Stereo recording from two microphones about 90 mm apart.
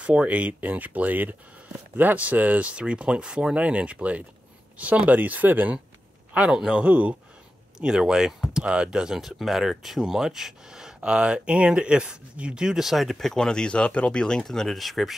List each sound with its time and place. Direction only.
0.0 s speech: 15° right (ahead or behind)
6.3 s speech: 10° right (ahead or behind)